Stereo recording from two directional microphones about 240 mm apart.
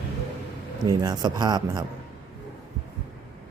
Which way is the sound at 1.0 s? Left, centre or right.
Centre.